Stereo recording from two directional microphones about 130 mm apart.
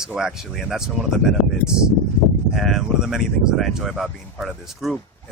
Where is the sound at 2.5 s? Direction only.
Centre (ahead or behind).